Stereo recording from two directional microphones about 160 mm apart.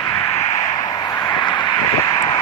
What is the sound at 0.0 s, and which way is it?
Vehicle, 20° left (ahead or behind).